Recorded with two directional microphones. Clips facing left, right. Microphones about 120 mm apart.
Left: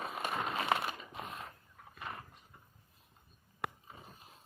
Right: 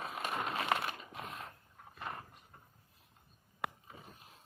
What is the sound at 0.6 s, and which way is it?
Crumpling, 10° left (ahead or behind).